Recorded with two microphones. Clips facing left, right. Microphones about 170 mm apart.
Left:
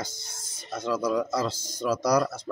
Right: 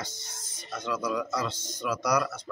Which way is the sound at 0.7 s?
30° left (ahead or behind).